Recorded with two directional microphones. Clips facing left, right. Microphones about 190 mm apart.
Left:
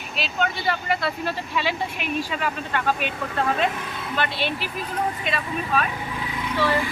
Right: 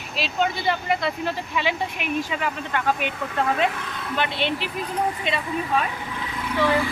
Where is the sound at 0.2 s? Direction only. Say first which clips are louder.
Right 2 dB; 25° right (ahead or behind).